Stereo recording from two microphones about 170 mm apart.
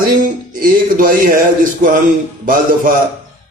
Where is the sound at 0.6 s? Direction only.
55° right (ahead or behind).